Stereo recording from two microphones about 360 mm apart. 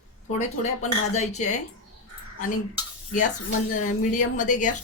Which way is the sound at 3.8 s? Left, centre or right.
Left.